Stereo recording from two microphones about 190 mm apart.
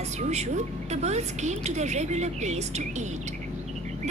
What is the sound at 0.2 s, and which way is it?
A woman's voice, 35° right (ahead or behind).